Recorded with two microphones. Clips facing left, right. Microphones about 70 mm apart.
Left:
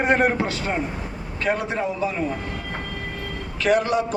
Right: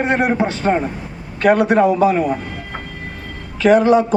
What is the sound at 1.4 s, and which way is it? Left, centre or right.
Speech, right.